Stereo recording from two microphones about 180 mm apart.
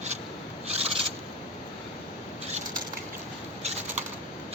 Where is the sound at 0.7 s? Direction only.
35° right (ahead or behind).